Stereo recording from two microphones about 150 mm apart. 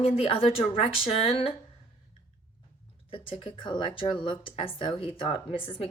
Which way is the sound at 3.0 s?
35° left (ahead or behind).